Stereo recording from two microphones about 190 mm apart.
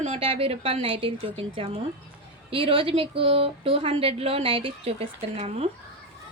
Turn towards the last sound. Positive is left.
turn(degrees=-30)  # may be behind; listen again after turning